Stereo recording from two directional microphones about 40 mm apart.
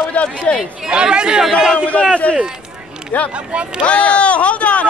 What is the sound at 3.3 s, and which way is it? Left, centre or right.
Speech, right.